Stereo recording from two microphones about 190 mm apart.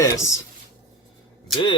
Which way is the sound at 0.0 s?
15° left (ahead or behind).